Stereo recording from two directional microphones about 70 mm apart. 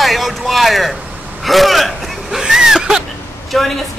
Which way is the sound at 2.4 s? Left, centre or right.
Centre.